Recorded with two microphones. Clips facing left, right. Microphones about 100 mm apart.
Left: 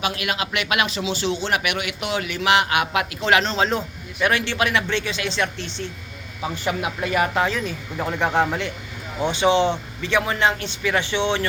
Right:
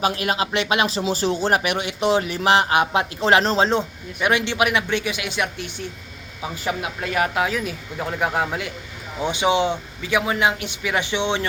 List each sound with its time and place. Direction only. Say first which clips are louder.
0.0 s speech: right 3 dB; 35° right (ahead or behind)
4.2 s a man's voice: right 1 dB; 15° right (ahead or behind)
6.7 s a man's voice: left 2 dB; centre (ahead or behind); by 11.4 s 15° right (ahead or behind)